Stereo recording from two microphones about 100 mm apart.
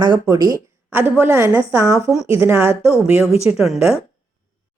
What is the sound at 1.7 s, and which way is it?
Speech, 35° right (ahead or behind).